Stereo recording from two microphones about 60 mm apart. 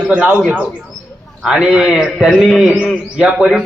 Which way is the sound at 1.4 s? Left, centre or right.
Centre.